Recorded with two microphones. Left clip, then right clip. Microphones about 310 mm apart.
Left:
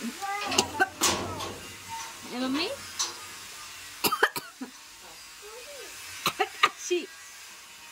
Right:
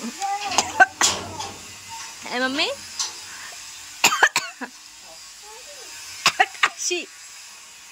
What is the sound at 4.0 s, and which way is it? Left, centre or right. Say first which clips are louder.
Cough: right 8 dB; centre.